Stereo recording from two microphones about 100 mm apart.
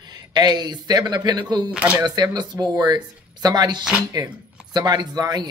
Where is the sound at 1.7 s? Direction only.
10° right (ahead or behind).